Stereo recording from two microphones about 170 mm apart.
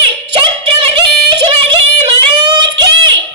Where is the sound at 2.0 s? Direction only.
25° right (ahead or behind).